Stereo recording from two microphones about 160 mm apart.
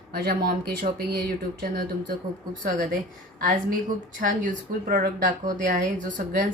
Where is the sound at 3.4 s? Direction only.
60° right (ahead or behind).